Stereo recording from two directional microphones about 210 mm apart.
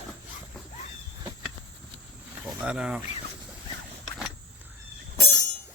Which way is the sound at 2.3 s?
5° right (ahead or behind).